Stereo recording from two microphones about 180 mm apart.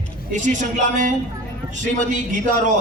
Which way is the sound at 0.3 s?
45° right (ahead or behind).